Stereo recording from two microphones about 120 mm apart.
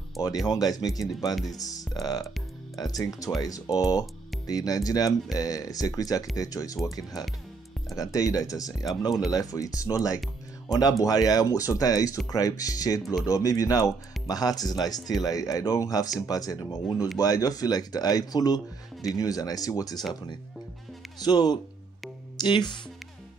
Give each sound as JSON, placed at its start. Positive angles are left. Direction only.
{"t": 0.5, "sound": "speech", "side_deg": 30}
{"t": 21.2, "sound": "speech", "side_deg": 35}